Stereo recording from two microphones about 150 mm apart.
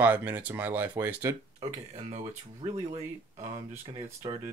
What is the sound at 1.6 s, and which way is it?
Speech, 45° right (ahead or behind).